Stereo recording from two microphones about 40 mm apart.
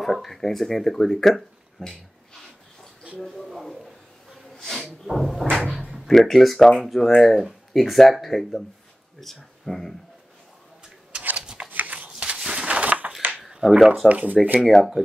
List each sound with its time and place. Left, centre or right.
0.0 s speech: centre
3.2 s speech: centre
5.1 s speech: centre
11.6 s shuffling cards: right
11.9 s a sound: right
13.4 s a sound: centre
14.0 s speech: right